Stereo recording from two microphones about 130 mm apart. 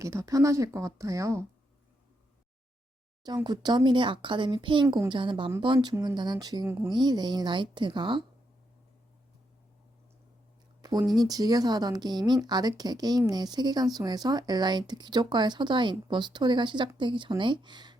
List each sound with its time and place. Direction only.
0.0 s speech: 25° right (ahead or behind)
3.2 s speech: 30° right (ahead or behind)
10.8 s a sound: 30° right (ahead or behind)
11.1 s speech: 30° right (ahead or behind)